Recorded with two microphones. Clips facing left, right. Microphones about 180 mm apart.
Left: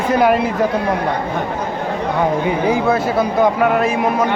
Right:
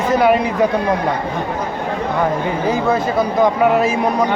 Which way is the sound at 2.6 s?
10° left (ahead or behind).